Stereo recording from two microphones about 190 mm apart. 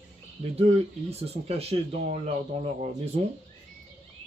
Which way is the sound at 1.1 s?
35° right (ahead or behind).